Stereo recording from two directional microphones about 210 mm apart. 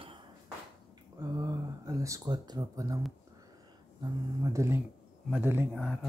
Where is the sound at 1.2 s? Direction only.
15° right (ahead or behind).